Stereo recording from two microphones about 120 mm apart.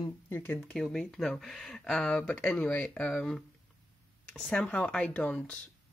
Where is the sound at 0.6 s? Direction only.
5° left (ahead or behind).